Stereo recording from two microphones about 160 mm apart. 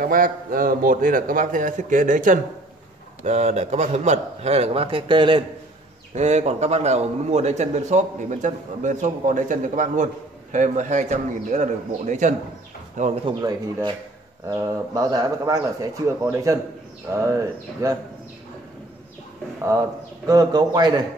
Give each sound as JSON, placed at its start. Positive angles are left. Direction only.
{"t": 0.0, "sound": "a man's voice", "side_deg": -60}
{"t": 6.1, "sound": "a man's voice", "side_deg": -45}
{"t": 13.2, "sound": "speech", "side_deg": -25}
{"t": 19.6, "sound": "speech", "side_deg": -20}